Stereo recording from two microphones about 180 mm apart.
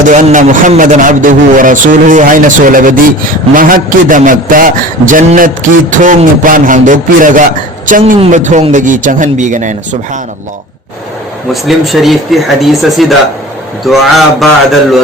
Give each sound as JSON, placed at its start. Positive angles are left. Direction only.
{"t": 0.1, "sound": "a man's voice", "side_deg": -45}
{"t": 11.5, "sound": "speech", "side_deg": 0}